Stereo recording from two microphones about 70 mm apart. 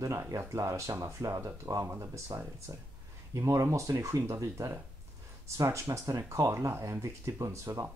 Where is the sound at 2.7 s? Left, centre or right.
Right.